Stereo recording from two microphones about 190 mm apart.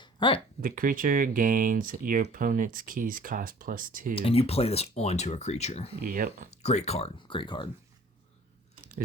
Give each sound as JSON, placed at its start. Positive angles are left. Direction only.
{"t": 0.0, "sound": "a sound", "side_deg": 25}
{"t": 0.6, "sound": "speech", "side_deg": -45}
{"t": 4.1, "sound": "speech", "side_deg": 30}
{"t": 6.0, "sound": "speech", "side_deg": -50}
{"t": 6.5, "sound": "speech", "side_deg": 35}